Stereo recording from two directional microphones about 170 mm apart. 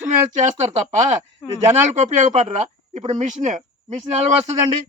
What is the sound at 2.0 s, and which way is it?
Speech, 40° right (ahead or behind).